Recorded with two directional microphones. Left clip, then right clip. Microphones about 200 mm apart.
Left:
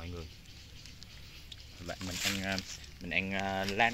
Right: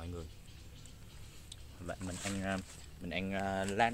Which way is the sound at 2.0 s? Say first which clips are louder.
Left 10 dB; 25° left (ahead or behind).